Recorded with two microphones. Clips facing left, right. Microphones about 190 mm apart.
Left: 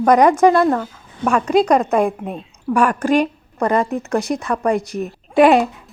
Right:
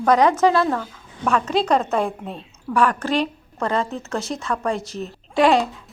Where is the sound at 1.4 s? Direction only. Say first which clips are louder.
Left 8 dB; 10° left (ahead or behind).